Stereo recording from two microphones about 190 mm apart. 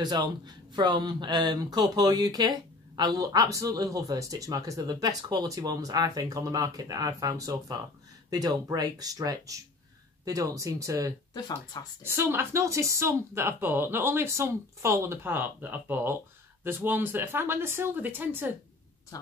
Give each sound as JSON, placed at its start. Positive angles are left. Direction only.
{"t": 0.0, "sound": "speech", "side_deg": -20}
{"t": 11.3, "sound": "speech", "side_deg": 20}
{"t": 12.0, "sound": "speech", "side_deg": -10}